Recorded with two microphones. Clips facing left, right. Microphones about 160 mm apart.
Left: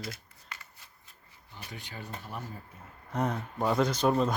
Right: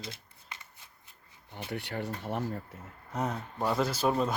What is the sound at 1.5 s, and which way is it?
Speech, 70° right (ahead or behind).